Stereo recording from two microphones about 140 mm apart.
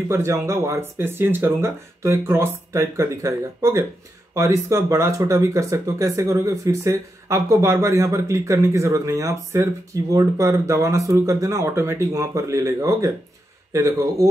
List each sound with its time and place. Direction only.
0.1 s speech: 20° right (ahead or behind)